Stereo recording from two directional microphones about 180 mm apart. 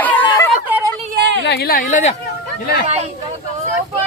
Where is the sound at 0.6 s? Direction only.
10° right (ahead or behind).